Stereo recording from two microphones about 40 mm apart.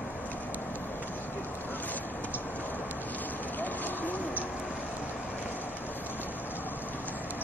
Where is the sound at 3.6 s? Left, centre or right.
Left.